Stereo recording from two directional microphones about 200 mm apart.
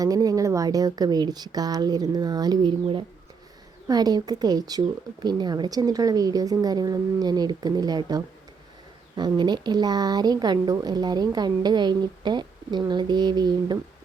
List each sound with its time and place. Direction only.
0.0 s speech: 20° right (ahead or behind)